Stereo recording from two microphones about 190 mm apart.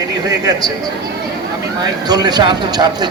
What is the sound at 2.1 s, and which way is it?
Speech, 20° right (ahead or behind).